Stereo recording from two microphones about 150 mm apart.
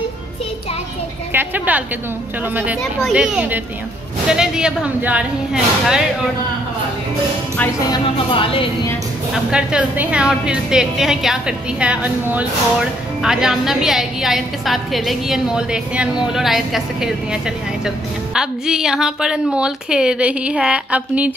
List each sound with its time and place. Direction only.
1.3 s a woman's voice: 10° right (ahead or behind)
7.9 s speech: 35° left (ahead or behind)
9.3 s a woman's voice: 5° right (ahead or behind)